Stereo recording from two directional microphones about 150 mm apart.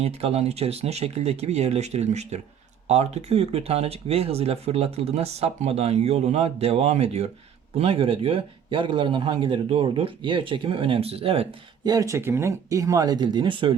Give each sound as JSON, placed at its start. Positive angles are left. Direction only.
{"t": 0.0, "sound": "speech", "side_deg": -40}
{"t": 11.9, "sound": "speech", "side_deg": -20}